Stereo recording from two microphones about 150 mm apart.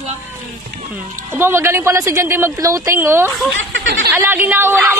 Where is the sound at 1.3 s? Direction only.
15° right (ahead or behind).